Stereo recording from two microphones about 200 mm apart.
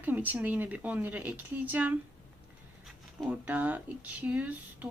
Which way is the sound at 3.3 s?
5° right (ahead or behind).